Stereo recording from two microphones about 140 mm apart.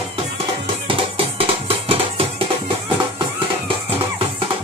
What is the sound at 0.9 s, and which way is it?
Music, 40° right (ahead or behind).